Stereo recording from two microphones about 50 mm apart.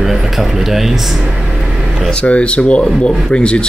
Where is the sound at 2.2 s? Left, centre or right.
Left.